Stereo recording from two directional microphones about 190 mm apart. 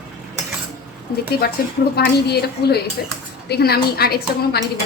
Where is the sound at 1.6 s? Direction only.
50° left (ahead or behind).